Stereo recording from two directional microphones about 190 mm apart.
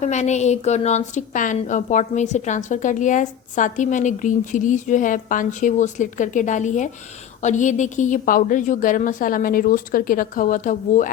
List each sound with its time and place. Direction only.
0.0 s a woman's voice: 35° left (ahead or behind)